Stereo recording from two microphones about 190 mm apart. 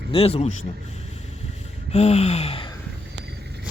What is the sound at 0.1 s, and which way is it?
Speech, 30° left (ahead or behind).